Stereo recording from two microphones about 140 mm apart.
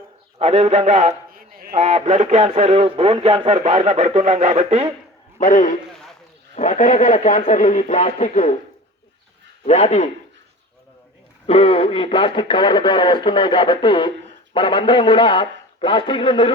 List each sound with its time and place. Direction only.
0.3 s speech: 50° right (ahead or behind)
1.3 s a sound: 90° right
1.8 s speech: 50° right (ahead or behind)
5.4 s a man's voice: 65° left (ahead or behind)
9.6 s speech: 50° left (ahead or behind)
11.4 s speech: 40° left (ahead or behind)